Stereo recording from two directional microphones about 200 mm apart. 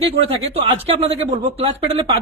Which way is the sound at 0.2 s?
30° right (ahead or behind).